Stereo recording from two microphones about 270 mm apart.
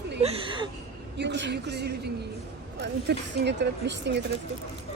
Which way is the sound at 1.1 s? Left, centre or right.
Right.